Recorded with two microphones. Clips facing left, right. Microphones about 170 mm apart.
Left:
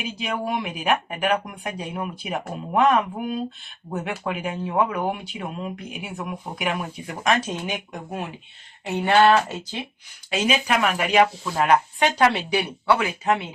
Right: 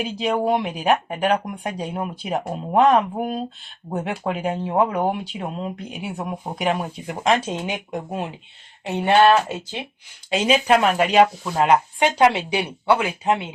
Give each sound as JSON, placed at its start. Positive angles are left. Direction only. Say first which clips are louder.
{"t": 0.0, "sound": "speech", "louder": "right 6 dB", "side_deg": -35}
{"t": 7.1, "sound": "speech", "louder": "right 3 dB", "side_deg": -20}
{"t": 9.0, "sound": "speech", "louder": "right 2 dB", "side_deg": -15}
{"t": 10.3, "sound": "speech", "louder": "right 5 dB", "side_deg": -30}